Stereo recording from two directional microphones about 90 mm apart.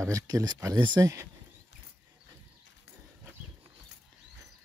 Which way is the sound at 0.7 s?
55° right (ahead or behind).